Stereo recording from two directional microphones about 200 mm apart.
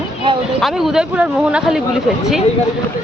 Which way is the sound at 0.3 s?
25° right (ahead or behind).